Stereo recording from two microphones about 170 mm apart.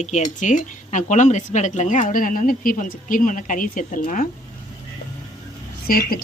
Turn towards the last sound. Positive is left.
turn(degrees=60)  # may be behind; listen again after turning